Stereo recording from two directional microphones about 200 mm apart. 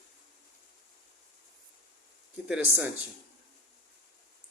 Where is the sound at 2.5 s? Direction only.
10° right (ahead or behind).